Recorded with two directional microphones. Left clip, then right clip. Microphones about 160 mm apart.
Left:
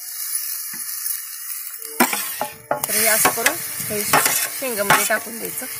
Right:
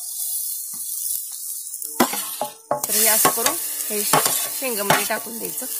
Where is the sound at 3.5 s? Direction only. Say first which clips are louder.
Left 1 dB; 25° right (ahead or behind).